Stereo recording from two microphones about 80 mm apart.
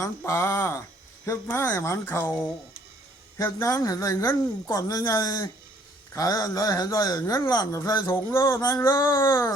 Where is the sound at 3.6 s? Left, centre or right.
Left.